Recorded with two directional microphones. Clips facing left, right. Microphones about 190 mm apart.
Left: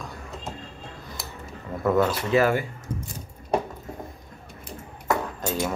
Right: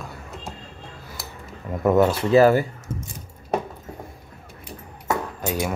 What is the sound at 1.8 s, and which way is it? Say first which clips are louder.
Speech: right 4 dB; 20° right (ahead or behind).